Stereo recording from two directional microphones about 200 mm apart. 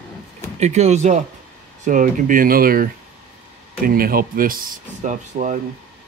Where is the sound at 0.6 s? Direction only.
35° right (ahead or behind).